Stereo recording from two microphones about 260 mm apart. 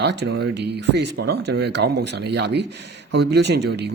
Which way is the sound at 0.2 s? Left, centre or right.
Right.